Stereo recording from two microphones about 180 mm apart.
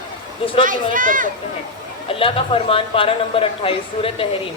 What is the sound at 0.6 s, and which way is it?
Speech, 50° right (ahead or behind).